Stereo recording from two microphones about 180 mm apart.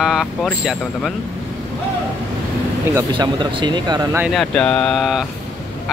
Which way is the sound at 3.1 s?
25° right (ahead or behind).